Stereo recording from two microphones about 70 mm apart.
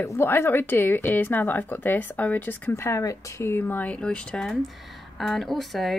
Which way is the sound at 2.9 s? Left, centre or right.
Left.